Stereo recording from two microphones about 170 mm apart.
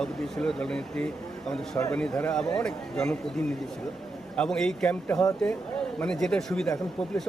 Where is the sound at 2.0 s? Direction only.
5° left (ahead or behind).